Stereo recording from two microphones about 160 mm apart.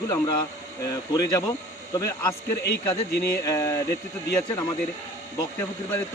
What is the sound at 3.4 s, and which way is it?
Speech, 20° left (ahead or behind).